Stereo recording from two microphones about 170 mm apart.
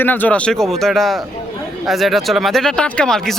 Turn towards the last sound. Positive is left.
turn(degrees=5)  # may be behind; listen again after turning